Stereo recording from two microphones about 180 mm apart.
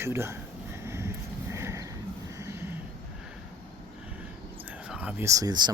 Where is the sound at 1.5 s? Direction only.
15° right (ahead or behind).